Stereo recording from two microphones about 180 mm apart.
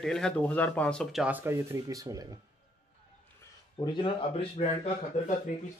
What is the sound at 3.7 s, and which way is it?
Speech, 30° left (ahead or behind).